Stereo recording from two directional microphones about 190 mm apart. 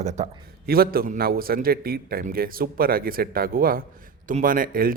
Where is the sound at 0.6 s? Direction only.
50° right (ahead or behind).